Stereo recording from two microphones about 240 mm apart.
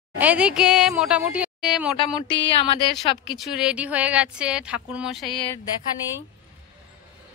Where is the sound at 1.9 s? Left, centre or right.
Left.